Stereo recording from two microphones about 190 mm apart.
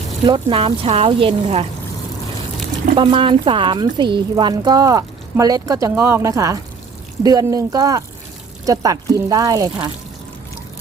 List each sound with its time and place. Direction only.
0.3 s speech: 25° right (ahead or behind)
2.9 s speech: 25° right (ahead or behind)